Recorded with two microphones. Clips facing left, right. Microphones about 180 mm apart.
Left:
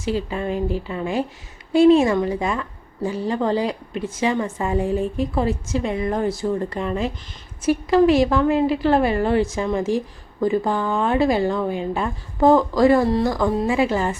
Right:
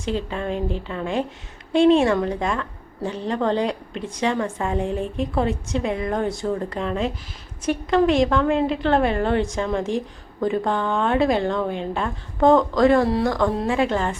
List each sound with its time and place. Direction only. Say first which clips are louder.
0.0 s a woman's voice: left 2 dB; 5° left (ahead or behind)